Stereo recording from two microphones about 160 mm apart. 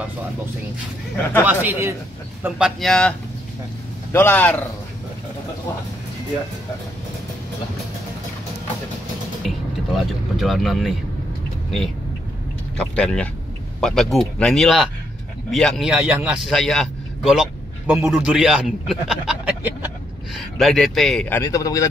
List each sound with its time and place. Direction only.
1.4 s speech: 10° right (ahead or behind)
2.4 s a man's voice: centre (ahead or behind)
9.5 s speech: centre (ahead or behind)
12.7 s a man's voice: 5° left (ahead or behind); by 19.9 s 10° right (ahead or behind)
20.3 s a man's voice: centre (ahead or behind)
21.4 s a man's voice: 20° left (ahead or behind)